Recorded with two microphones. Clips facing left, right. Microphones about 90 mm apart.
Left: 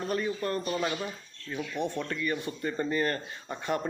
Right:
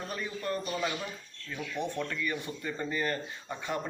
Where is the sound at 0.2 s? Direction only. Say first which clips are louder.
Left 4 dB; 45° left (ahead or behind).